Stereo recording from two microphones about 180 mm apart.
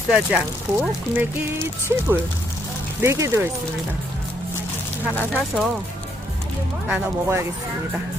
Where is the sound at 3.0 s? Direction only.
15° right (ahead or behind).